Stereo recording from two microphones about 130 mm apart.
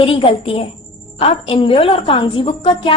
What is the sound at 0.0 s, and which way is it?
A woman's voice, 45° left (ahead or behind).